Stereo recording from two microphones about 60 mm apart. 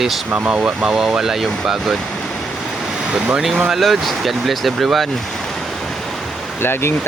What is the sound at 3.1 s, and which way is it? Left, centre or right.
Speech, centre.